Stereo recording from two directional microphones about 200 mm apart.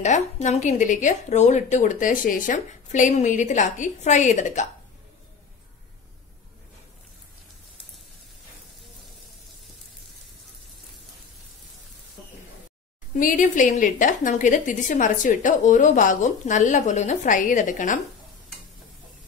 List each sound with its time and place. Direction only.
0.0 s a woman's voice: 35° left (ahead or behind)
13.1 s a woman's voice: 40° left (ahead or behind)